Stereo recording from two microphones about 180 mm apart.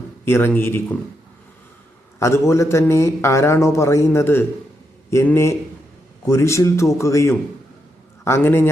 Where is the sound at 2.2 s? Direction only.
15° left (ahead or behind).